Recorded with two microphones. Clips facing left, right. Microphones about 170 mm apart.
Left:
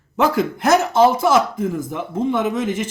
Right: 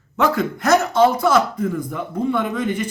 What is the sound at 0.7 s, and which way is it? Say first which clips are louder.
Speech: left 1 dB; 25° left (ahead or behind).